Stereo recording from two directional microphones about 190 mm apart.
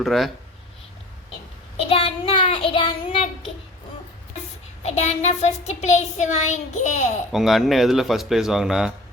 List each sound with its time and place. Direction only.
0.0 s speech: centre (ahead or behind)
1.7 s child singing: 30° left (ahead or behind)
4.9 s a sound: 35° left (ahead or behind)
7.3 s speech: centre (ahead or behind)